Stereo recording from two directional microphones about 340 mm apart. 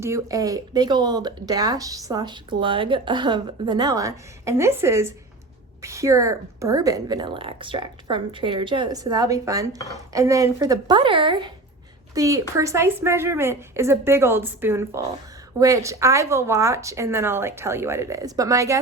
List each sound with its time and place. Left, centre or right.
0.0 s speech: centre